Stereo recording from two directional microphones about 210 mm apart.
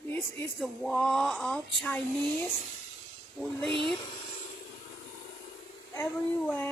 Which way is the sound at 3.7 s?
25° right (ahead or behind).